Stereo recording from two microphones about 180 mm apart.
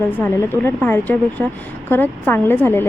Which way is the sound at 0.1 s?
10° left (ahead or behind).